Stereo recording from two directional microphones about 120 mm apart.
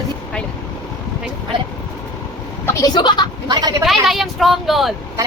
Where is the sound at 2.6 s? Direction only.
30° left (ahead or behind).